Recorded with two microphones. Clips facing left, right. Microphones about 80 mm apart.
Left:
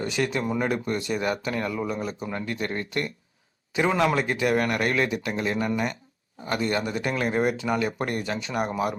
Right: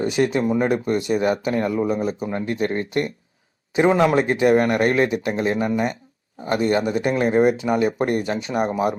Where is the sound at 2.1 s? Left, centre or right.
Centre.